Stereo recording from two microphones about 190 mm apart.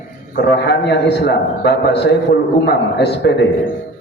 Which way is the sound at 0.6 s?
60° left (ahead or behind).